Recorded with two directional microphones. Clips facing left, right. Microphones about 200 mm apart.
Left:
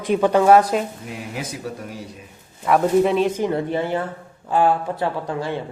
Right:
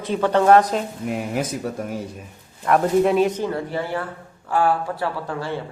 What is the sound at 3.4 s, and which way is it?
Speech, 20° left (ahead or behind).